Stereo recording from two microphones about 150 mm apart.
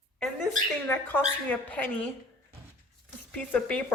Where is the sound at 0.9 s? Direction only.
10° left (ahead or behind).